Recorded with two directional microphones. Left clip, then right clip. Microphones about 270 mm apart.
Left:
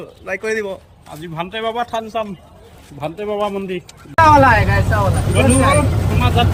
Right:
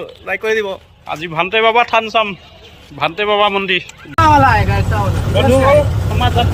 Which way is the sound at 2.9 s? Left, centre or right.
Right.